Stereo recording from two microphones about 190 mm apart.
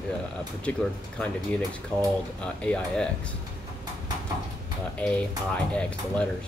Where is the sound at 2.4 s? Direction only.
5° left (ahead or behind).